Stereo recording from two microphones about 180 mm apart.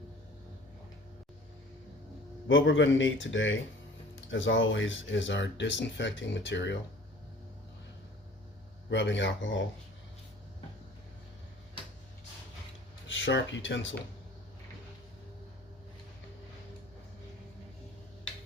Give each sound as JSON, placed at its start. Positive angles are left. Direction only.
{"t": 2.5, "sound": "speech", "side_deg": 90}
{"t": 8.9, "sound": "speech", "side_deg": 80}
{"t": 13.1, "sound": "speech", "side_deg": 90}